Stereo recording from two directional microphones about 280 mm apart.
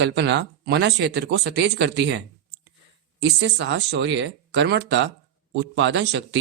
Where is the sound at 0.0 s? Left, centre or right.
Right.